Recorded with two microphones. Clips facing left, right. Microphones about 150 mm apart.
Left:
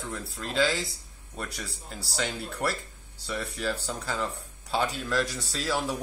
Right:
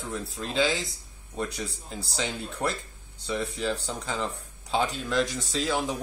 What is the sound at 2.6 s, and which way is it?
Speech, 15° right (ahead or behind).